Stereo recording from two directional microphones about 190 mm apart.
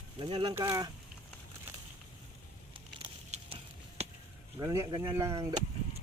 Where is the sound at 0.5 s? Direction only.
15° right (ahead or behind).